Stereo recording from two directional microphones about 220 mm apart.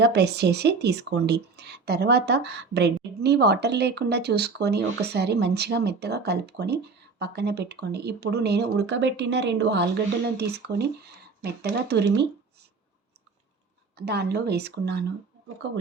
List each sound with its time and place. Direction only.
0.0 s speech: 50° right (ahead or behind)
14.0 s speech: 50° right (ahead or behind)